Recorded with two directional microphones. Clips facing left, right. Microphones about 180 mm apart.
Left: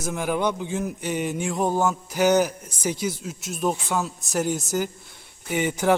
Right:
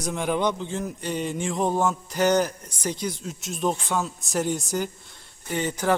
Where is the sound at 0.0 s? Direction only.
5° left (ahead or behind).